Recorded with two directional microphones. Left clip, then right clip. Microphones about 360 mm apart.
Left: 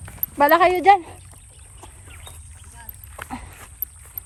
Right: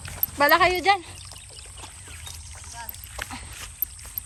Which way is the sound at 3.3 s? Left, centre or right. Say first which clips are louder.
Left 2 dB; centre.